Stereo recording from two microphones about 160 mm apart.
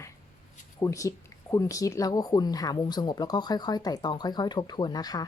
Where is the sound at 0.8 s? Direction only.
20° left (ahead or behind).